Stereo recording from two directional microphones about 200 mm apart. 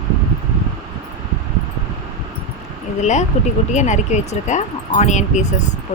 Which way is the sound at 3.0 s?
35° left (ahead or behind).